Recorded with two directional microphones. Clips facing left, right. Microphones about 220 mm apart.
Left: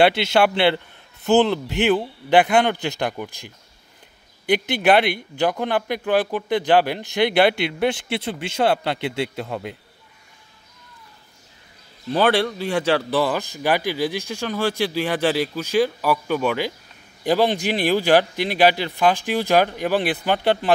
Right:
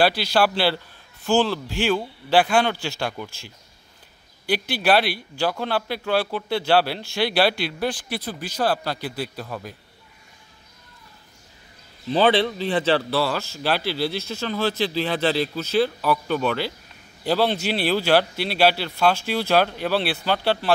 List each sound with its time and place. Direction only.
0.0 s speech: 25° left (ahead or behind)
12.2 s speech: 10° left (ahead or behind)